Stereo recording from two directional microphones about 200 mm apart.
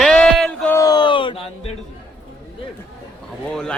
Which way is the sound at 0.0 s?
Centre (ahead or behind).